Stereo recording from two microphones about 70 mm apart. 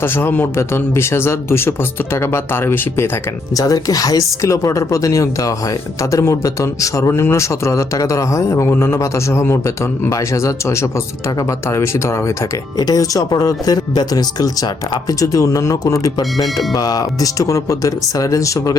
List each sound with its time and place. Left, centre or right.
0.0 s speech: left
3.5 s a man's voice: left
12.8 s speech: left
15.2 s speech: left